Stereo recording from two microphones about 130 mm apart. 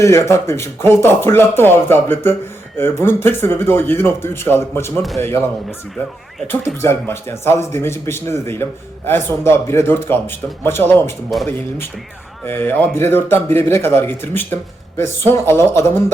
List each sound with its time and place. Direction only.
0.0 s speech: 20° left (ahead or behind)
6.8 s speech: 20° left (ahead or behind)
11.3 s speech: centre (ahead or behind)
12.5 s speech: 15° left (ahead or behind)